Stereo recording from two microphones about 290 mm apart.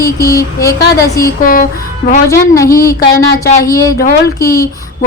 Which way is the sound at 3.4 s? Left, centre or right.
Left.